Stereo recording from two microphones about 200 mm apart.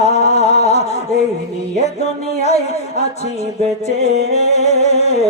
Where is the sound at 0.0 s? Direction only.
35° left (ahead or behind).